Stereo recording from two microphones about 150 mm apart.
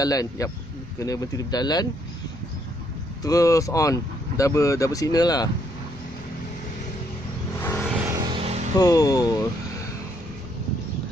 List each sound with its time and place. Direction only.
0.0 s speech: 25° left (ahead or behind)
3.2 s speech: 25° left (ahead or behind)
7.5 s vehicle: 15° left (ahead or behind)
8.3 s vehicle: 40° right (ahead or behind)
8.7 s speech: 25° left (ahead or behind)